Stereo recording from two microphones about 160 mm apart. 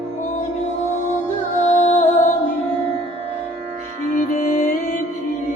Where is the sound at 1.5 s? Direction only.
45° left (ahead or behind).